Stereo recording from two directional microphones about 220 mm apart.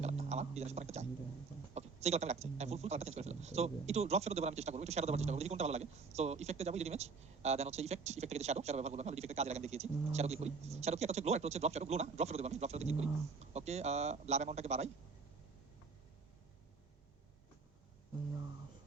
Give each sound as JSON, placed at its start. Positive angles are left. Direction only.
{"t": 0.0, "sound": "speech", "side_deg": -30}